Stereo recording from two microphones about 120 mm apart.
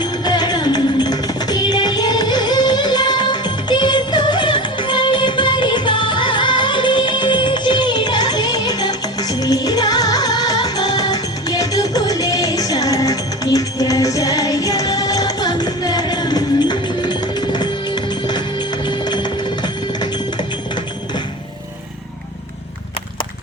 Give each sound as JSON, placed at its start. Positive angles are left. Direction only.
{"t": 0.0, "sound": "music", "side_deg": 35}